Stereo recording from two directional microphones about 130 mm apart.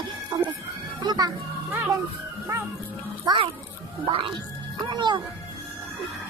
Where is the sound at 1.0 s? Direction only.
30° right (ahead or behind).